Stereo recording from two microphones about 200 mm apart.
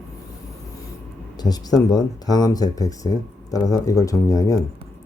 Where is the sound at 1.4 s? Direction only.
20° left (ahead or behind).